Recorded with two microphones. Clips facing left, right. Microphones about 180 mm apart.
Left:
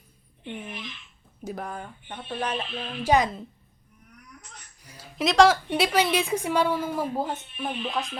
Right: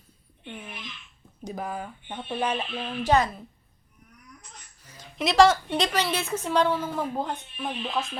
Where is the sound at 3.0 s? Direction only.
15° left (ahead or behind).